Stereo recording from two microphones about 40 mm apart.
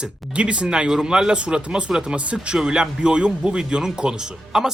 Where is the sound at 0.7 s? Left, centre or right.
Centre.